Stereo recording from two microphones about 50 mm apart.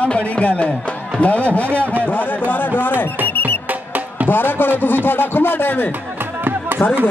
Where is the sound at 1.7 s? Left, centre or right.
Right.